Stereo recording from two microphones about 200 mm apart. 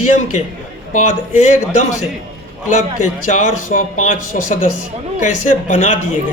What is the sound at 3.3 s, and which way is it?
Speech, 40° left (ahead or behind).